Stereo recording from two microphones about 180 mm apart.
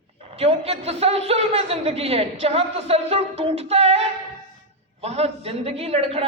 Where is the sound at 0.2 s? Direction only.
35° right (ahead or behind).